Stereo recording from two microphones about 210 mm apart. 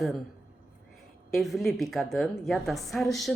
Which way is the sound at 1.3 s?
Centre (ahead or behind).